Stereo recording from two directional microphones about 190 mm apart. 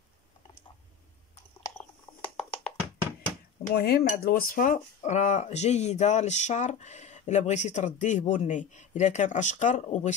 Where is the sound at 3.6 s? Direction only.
55° left (ahead or behind).